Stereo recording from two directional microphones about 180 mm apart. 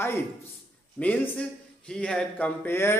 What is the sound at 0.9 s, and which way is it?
Speech, 10° left (ahead or behind).